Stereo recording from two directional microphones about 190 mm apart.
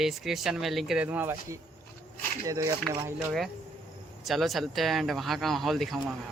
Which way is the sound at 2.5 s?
15° right (ahead or behind).